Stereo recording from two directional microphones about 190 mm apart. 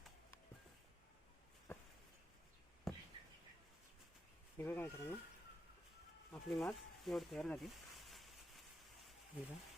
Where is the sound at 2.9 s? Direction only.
Centre (ahead or behind).